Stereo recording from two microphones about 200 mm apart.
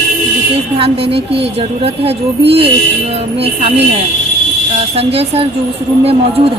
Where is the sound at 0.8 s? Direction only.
30° right (ahead or behind).